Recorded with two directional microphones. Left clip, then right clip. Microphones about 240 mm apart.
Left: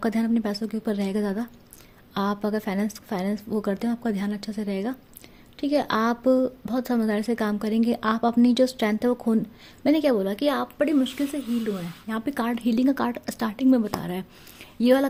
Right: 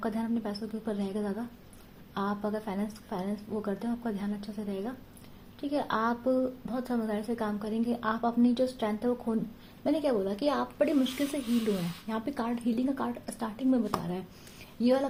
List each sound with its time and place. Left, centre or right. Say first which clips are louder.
0.0 s a woman's voice: left 8 dB; left